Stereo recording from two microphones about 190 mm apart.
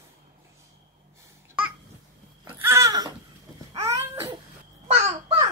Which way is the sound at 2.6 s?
15° right (ahead or behind).